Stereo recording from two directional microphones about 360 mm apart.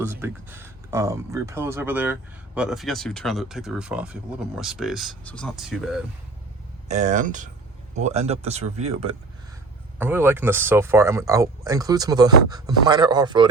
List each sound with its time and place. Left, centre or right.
0.0 s speech: centre
6.8 s speech: centre
10.0 s speech: centre